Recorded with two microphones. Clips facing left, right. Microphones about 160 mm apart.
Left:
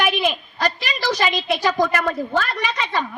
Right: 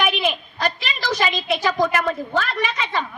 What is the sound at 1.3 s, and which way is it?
A woman's voice, 55° right (ahead or behind).